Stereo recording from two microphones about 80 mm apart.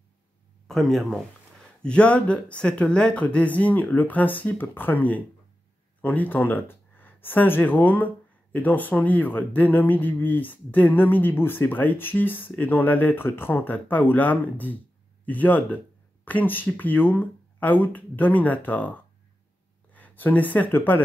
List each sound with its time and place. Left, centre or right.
0.7 s speech: centre; by 21.0 s left